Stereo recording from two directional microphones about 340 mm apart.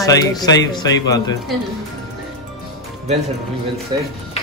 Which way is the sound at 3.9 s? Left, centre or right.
Centre.